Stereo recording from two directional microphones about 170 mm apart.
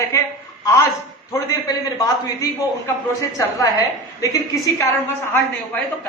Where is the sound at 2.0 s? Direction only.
20° left (ahead or behind).